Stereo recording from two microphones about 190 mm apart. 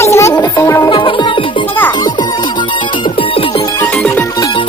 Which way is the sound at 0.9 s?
25° left (ahead or behind).